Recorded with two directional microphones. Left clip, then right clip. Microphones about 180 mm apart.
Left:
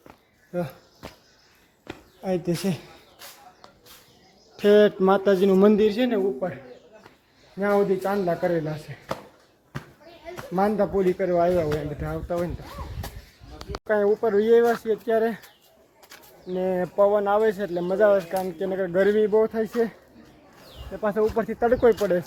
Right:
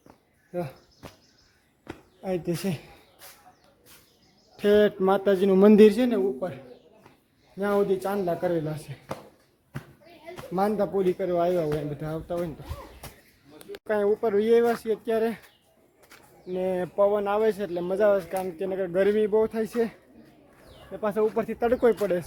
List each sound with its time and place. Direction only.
0.5 s cricket: centre (ahead or behind)
1.9 s a sound: centre (ahead or behind)
4.5 s speech: 5° left (ahead or behind)
5.7 s a man's voice: 50° right (ahead or behind)
6.0 s a man's voice: 20° right (ahead or behind)
7.6 s speech: 5° right (ahead or behind)
9.7 s children playing: 5° left (ahead or behind)
10.5 s speech: 10° right (ahead or behind)
13.8 s speech: centre (ahead or behind)
16.5 s speech: 10° right (ahead or behind)
21.0 s speech: 5° right (ahead or behind)